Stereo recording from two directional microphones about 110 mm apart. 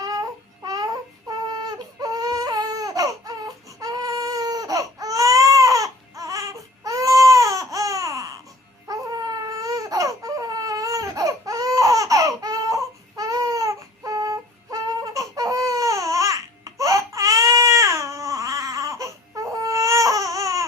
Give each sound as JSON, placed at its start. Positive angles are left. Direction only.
{"t": 0.0, "sound": "babbling", "side_deg": -35}
{"t": 1.3, "sound": "baby cry", "side_deg": -35}